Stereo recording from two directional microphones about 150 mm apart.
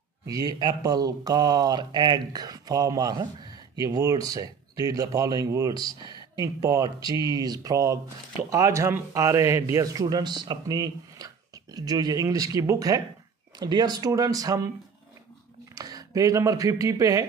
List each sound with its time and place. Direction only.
0.3 s speech: 25° right (ahead or behind)
6.0 s a sound: 30° left (ahead or behind)
6.4 s speech: 20° right (ahead or behind)
15.7 s speech: 25° right (ahead or behind)